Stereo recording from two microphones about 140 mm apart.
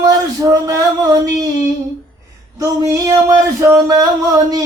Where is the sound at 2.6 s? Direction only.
25° right (ahead or behind).